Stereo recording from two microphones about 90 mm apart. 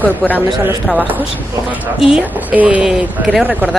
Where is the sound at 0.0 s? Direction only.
20° left (ahead or behind).